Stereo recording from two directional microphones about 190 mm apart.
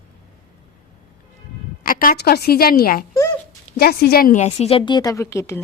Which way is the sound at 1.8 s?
50° left (ahead or behind).